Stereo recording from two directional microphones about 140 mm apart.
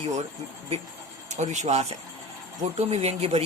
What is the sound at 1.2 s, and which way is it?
Speech, 55° right (ahead or behind).